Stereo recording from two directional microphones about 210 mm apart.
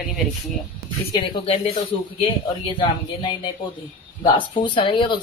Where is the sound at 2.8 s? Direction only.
20° left (ahead or behind).